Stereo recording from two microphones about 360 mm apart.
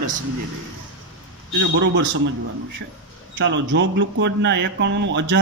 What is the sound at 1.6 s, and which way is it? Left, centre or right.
Speech, right.